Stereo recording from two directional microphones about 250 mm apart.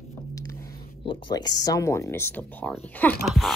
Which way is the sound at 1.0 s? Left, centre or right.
Centre.